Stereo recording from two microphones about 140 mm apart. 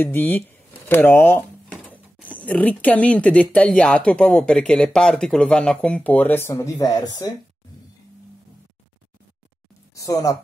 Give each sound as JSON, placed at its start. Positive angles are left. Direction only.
{"t": 0.0, "sound": "speech", "side_deg": 15}
{"t": 9.9, "sound": "a woman's voice", "side_deg": 25}